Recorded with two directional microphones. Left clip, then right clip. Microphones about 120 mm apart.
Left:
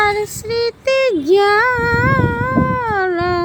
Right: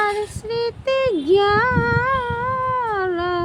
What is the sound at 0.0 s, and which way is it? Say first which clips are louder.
Child singing: left 5 dB; 35° left (ahead or behind).